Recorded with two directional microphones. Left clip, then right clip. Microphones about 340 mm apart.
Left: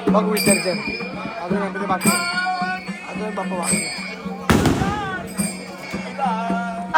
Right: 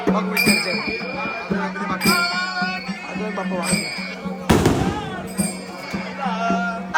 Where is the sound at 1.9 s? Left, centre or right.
Centre.